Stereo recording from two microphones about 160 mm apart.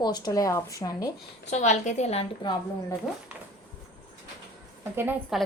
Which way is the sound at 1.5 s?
45° left (ahead or behind).